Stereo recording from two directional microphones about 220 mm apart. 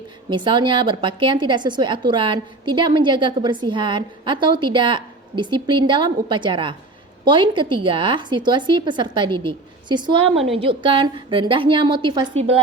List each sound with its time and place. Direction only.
0.3 s a woman's voice: 20° right (ahead or behind)
10.3 s a woman's voice: centre (ahead or behind)
10.6 s a woman's voice: 25° right (ahead or behind)